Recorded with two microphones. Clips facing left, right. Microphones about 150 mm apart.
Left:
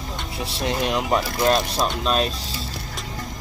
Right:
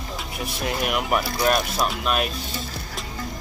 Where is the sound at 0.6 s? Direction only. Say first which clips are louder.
Left 2 dB; 25° left (ahead or behind).